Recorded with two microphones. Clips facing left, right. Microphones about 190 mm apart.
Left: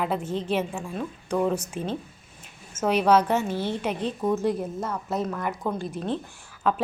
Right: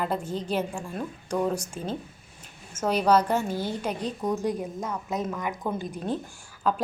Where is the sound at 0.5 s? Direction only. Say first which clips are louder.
Left 1 dB; centre (ahead or behind).